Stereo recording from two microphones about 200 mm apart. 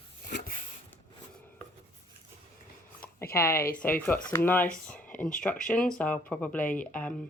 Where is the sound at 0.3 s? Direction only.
45° left (ahead or behind).